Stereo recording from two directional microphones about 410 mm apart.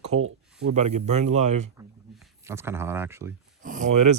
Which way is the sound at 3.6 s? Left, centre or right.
Centre.